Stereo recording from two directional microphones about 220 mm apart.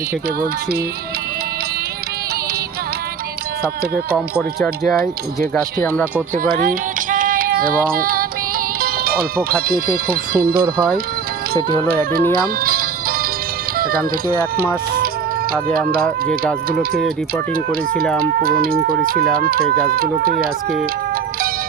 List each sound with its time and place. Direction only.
4.6 s speech: centre (ahead or behind)
6.3 s child singing: 40° right (ahead or behind)
12.5 s music: 40° right (ahead or behind)
13.7 s speech: 40° right (ahead or behind)
16.2 s speech: 40° right (ahead or behind)
17.5 s speech: 40° right (ahead or behind)